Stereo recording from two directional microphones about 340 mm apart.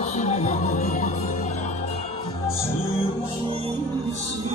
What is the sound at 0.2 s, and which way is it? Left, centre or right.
Music, centre.